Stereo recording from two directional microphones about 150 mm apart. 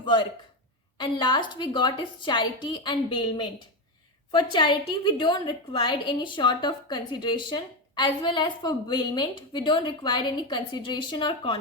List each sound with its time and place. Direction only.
0.0 s a woman's voice: 35° left (ahead or behind)